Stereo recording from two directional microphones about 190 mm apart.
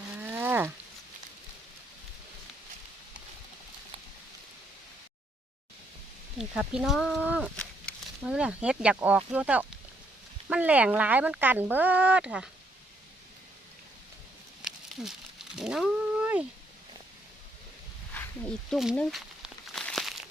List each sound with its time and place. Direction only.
0.2 s a sound: 10° right (ahead or behind)
6.4 s speech: 5° right (ahead or behind)
15.5 s cat: 5° right (ahead or behind)
18.7 s speech: centre (ahead or behind)
19.7 s crumpling: centre (ahead or behind)